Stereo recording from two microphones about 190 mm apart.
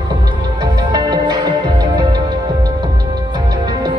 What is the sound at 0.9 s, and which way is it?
Music, 20° right (ahead or behind).